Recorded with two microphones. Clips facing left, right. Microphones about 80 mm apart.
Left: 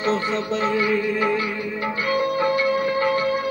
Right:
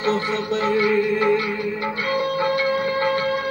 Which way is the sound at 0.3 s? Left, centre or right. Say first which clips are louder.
Right 1 dB; right.